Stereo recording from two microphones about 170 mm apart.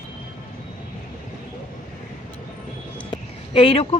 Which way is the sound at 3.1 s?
30° left (ahead or behind).